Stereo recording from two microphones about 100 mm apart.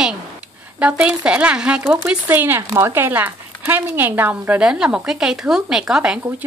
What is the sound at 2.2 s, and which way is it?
Speech, 20° right (ahead or behind).